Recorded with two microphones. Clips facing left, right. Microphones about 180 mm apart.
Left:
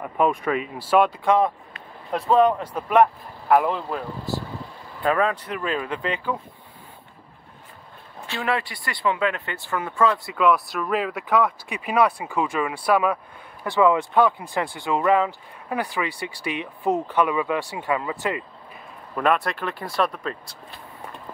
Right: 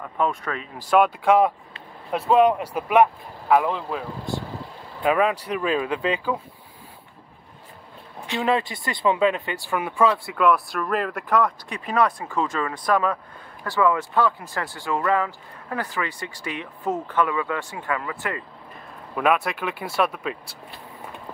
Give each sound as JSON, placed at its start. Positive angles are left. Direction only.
{"t": 0.0, "sound": "speech", "side_deg": 10}
{"t": 5.0, "sound": "speech", "side_deg": -10}
{"t": 8.3, "sound": "speech", "side_deg": -20}
{"t": 10.3, "sound": "speech", "side_deg": 0}
{"t": 19.1, "sound": "speech", "side_deg": -5}